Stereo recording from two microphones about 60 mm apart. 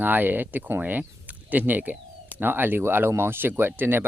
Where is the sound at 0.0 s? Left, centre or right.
Right.